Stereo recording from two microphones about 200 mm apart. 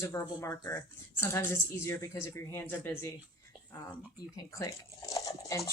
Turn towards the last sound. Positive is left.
turn(degrees=20)  # may be behind; listen again after turning